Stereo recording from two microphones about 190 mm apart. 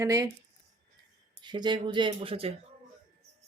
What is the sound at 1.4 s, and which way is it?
Speech, 25° right (ahead or behind).